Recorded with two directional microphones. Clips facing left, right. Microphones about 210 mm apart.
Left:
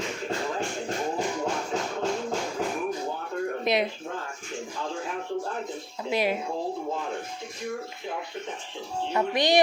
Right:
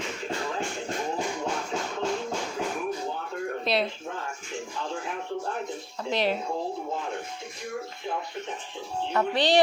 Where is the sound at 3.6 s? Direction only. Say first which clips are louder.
Left 1 dB; 15° left (ahead or behind).